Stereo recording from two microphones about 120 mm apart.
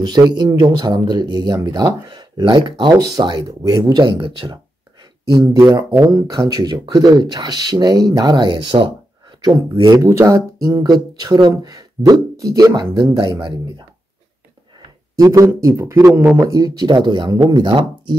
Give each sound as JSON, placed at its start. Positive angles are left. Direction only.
{"t": 0.0, "sound": "speech", "side_deg": -40}
{"t": 5.3, "sound": "speech", "side_deg": -30}
{"t": 9.9, "sound": "speech", "side_deg": -25}
{"t": 15.1, "sound": "speech", "side_deg": -30}